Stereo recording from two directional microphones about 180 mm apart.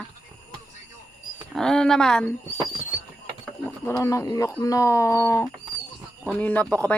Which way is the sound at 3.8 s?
15° left (ahead or behind).